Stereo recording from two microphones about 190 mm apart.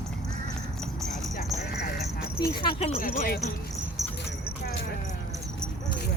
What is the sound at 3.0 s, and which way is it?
Speech, 45° left (ahead or behind).